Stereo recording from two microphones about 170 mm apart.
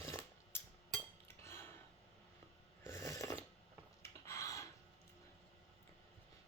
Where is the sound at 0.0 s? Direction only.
15° left (ahead or behind).